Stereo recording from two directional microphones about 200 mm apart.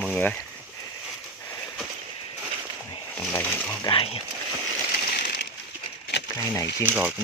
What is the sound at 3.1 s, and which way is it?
Speech, 10° left (ahead or behind).